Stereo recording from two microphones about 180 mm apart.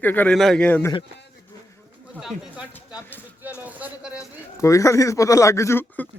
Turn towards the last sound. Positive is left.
turn(degrees=10)  # may be behind; listen again after turning